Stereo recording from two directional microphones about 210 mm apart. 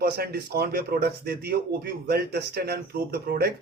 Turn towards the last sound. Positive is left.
turn(degrees=-50)  # may be behind; listen again after turning